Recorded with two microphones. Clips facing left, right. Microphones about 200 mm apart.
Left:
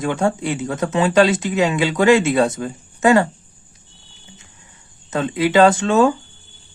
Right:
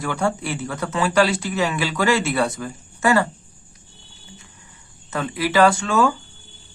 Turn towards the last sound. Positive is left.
turn(degrees=20)  # may be behind; listen again after turning